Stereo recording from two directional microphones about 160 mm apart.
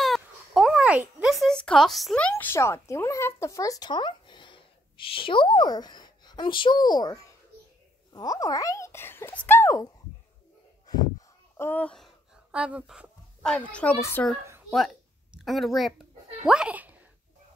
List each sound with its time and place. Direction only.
0.0 s speech: centre (ahead or behind); by 9.8 s 15° left (ahead or behind)
10.9 s a sound: 25° left (ahead or behind); by 12.1 s 5° left (ahead or behind)
12.4 s speech: 5° right (ahead or behind); by 14.2 s 15° left (ahead or behind)
15.3 s a woman's voice: centre (ahead or behind)